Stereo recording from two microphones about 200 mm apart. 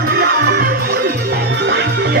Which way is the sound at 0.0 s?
50° right (ahead or behind).